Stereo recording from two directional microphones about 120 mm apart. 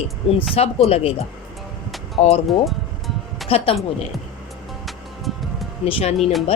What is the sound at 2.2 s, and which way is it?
Speech, 60° left (ahead or behind).